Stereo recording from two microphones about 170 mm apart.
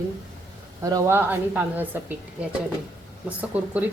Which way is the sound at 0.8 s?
15° right (ahead or behind).